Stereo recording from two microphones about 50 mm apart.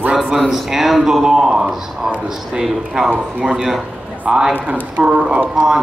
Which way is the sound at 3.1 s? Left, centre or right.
Centre.